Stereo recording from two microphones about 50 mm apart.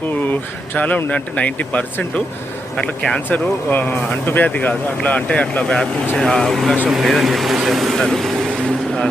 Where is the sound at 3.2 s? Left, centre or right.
Left.